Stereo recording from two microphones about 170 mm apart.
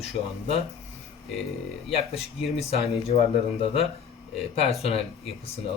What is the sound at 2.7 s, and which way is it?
Speech, 35° left (ahead or behind).